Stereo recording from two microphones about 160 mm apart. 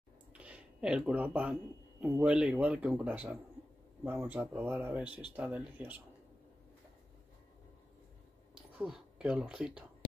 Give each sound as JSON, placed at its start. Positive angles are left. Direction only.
{"t": 0.3, "sound": "a man's voice", "side_deg": -5}
{"t": 5.0, "sound": "speech", "side_deg": 30}
{"t": 5.3, "sound": "a man's voice", "side_deg": -10}
{"t": 8.7, "sound": "speech", "side_deg": -5}